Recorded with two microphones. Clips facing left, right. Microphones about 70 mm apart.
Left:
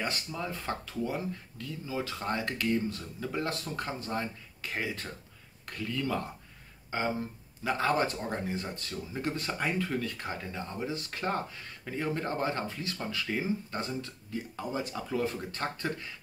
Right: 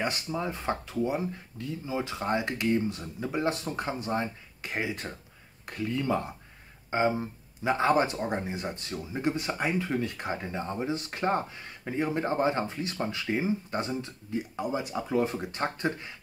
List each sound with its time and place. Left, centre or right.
0.0 s speech: right